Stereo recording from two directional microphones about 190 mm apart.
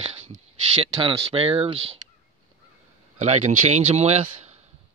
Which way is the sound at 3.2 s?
40° right (ahead or behind).